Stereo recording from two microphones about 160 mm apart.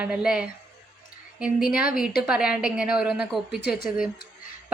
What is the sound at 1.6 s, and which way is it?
Speech, 65° left (ahead or behind).